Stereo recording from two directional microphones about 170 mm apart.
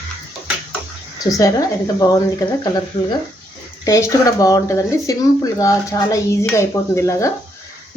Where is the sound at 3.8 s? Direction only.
20° left (ahead or behind).